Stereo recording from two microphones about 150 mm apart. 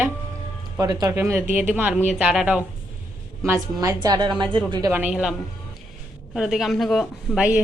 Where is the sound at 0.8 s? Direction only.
25° right (ahead or behind).